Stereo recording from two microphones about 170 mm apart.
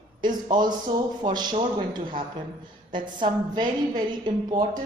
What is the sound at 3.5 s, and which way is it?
Speech, 25° right (ahead or behind).